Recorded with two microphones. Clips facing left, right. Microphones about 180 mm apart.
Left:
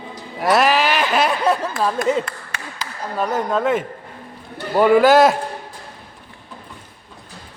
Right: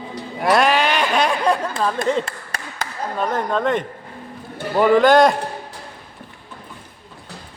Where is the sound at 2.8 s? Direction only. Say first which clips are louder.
Right 4 dB; 50° right (ahead or behind).